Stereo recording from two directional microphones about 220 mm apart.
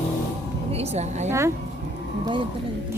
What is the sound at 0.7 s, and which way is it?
Speech, 30° right (ahead or behind).